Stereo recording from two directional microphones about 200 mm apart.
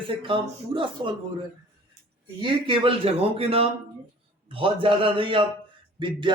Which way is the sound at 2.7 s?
30° right (ahead or behind).